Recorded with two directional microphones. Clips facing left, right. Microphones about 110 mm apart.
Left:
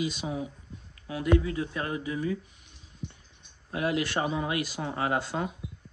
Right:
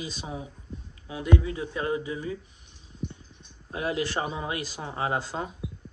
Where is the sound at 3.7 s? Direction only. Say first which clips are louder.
Left 1 dB; 30° right (ahead or behind).